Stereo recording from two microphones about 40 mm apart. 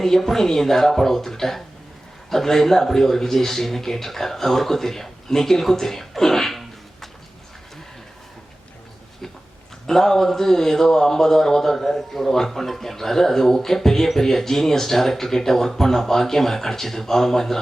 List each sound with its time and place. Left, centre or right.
0.0 s speech: centre
9.8 s speech: centre